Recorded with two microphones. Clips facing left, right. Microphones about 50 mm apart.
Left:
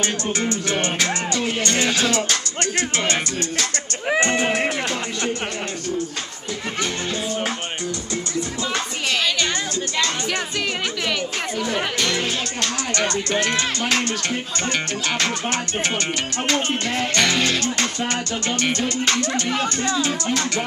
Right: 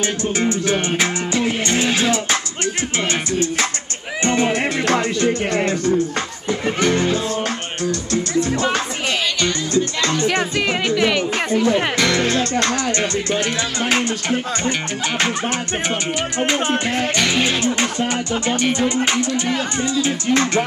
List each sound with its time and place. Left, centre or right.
0.0 s music: centre
4.2 s music: left
11.0 s speech: centre
12.2 s music: right
13.3 s music: centre
16.3 s speech: centre